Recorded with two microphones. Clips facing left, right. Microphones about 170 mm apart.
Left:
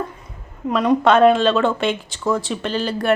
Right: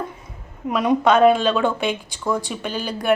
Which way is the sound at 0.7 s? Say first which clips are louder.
Left 2 dB; 10° right (ahead or behind).